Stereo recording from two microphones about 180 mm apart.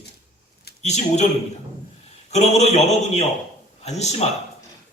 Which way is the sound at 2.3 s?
40° left (ahead or behind).